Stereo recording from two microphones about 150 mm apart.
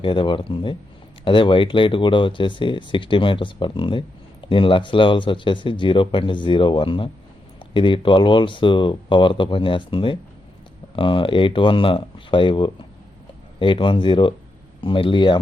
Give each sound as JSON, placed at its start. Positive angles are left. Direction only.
{"t": 0.0, "sound": "speech", "side_deg": 35}